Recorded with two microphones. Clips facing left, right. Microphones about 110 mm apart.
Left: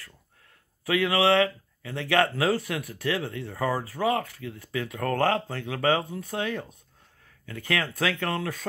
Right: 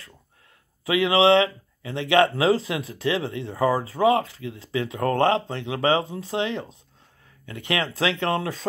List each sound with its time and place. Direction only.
0.8 s speech: 20° right (ahead or behind)